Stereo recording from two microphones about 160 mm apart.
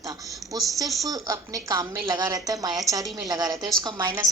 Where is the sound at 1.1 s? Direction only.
20° right (ahead or behind).